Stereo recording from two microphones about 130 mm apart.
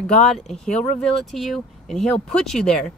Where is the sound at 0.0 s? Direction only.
5° left (ahead or behind).